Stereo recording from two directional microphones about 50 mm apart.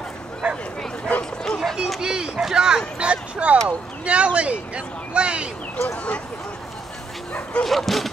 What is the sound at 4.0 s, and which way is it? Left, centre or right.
Speech, right.